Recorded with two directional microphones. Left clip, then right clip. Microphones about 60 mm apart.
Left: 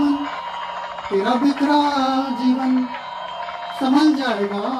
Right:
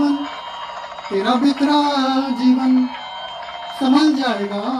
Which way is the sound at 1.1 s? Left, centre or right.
Right.